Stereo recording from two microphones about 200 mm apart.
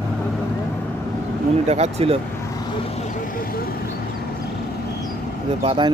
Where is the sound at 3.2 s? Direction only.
45° left (ahead or behind).